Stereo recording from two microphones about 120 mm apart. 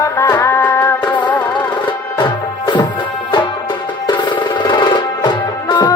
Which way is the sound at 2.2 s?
40° left (ahead or behind).